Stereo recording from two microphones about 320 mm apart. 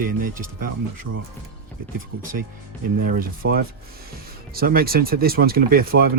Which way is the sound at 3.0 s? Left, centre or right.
Right.